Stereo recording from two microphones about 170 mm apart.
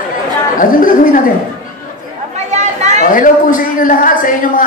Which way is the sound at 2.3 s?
40° right (ahead or behind).